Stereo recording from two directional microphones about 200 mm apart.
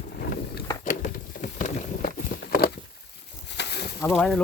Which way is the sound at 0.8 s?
40° left (ahead or behind).